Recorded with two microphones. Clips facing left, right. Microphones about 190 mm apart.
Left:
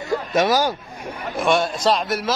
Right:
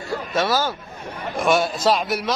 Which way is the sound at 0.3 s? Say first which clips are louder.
Left 3 dB; 15° left (ahead or behind).